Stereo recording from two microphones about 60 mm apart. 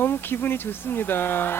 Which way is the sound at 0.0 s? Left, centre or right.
Left.